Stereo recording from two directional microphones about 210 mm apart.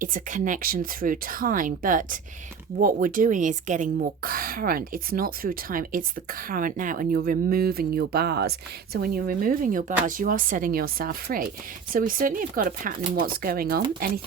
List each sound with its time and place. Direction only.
0.0 s a woman's voice: 40° right (ahead or behind)